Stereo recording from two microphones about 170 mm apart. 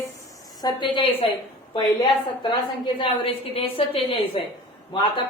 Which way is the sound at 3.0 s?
35° left (ahead or behind).